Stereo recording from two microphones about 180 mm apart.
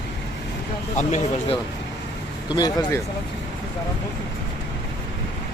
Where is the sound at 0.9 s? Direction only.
40° left (ahead or behind).